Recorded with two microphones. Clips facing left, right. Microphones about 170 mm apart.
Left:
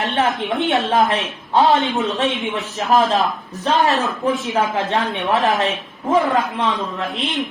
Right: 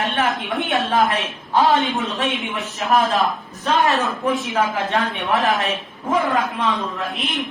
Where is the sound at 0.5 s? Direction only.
20° left (ahead or behind).